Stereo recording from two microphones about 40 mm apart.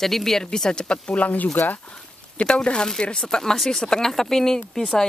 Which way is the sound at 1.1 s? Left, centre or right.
Left.